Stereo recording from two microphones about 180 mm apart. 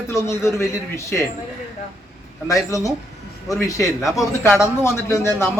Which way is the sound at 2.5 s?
20° left (ahead or behind).